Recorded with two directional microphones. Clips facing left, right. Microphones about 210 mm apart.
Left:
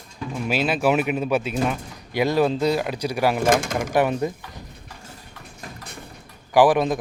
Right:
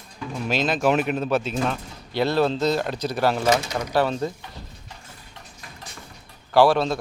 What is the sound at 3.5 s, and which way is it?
Speech, 50° left (ahead or behind).